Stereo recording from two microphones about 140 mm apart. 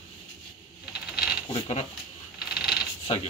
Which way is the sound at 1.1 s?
5° right (ahead or behind).